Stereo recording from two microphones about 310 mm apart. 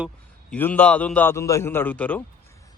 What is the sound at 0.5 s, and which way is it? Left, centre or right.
Speech, centre.